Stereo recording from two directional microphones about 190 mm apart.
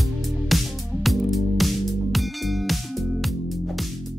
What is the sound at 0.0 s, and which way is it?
Music, centre (ahead or behind).